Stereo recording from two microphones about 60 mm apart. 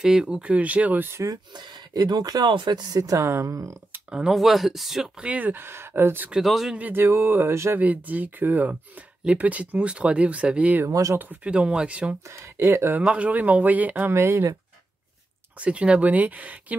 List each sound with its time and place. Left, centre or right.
0.0 s speech: centre
2.0 s speech: right
3.2 s speech: right
4.1 s speech: centre
5.2 s speech: right
6.4 s speech: centre
6.8 s speech: right
7.7 s speech: right
10.9 s speech: right
11.4 s speech: centre
12.3 s speech: right
13.0 s speech: right
14.1 s speech: right
15.6 s speech: centre